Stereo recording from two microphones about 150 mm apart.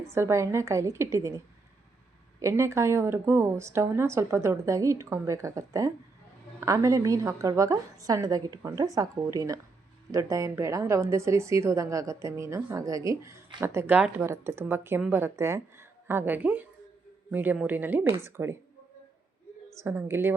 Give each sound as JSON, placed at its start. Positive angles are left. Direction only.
{"t": 0.0, "sound": "a woman's voice", "side_deg": -20}
{"t": 2.4, "sound": "a woman's voice", "side_deg": -20}
{"t": 19.7, "sound": "speech", "side_deg": -15}